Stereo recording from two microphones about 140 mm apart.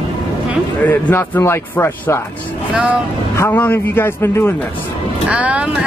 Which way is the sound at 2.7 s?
10° right (ahead or behind).